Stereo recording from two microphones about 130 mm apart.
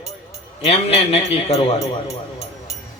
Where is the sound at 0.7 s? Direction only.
50° left (ahead or behind).